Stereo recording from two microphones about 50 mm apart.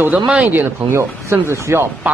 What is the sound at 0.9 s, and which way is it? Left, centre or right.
Speech, right.